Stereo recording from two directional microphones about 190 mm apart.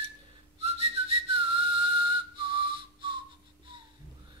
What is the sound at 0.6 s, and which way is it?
Whistling, 30° right (ahead or behind).